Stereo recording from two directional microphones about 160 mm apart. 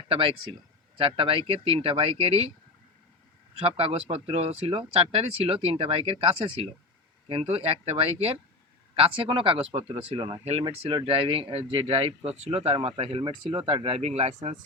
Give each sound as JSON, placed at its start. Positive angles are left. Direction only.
{"t": 0.1, "sound": "speech", "side_deg": -35}
{"t": 3.6, "sound": "speech", "side_deg": -35}